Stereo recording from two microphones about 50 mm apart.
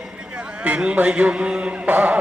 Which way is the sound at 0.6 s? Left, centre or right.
Right.